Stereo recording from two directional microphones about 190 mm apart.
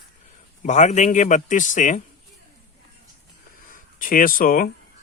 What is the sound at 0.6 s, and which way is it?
Speech, 40° left (ahead or behind).